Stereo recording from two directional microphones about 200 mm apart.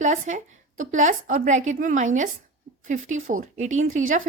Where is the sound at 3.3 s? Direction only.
40° right (ahead or behind).